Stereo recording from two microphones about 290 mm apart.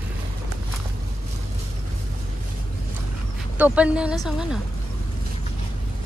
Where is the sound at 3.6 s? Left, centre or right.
Centre.